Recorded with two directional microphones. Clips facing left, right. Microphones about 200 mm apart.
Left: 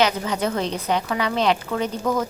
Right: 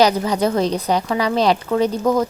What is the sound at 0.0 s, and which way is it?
Speech, 35° right (ahead or behind).